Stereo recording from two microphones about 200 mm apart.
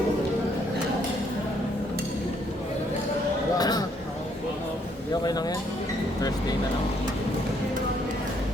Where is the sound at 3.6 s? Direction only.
20° left (ahead or behind).